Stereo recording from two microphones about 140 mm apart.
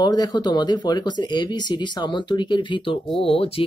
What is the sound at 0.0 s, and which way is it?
Speech, 30° left (ahead or behind).